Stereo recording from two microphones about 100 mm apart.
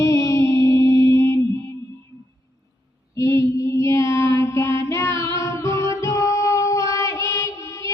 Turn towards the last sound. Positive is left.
turn(degrees=30)  # may be behind; listen again after turning